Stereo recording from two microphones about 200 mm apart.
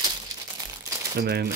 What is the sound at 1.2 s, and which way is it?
Speech, 50° right (ahead or behind).